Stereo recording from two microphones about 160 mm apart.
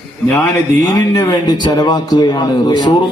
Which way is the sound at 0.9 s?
25° left (ahead or behind).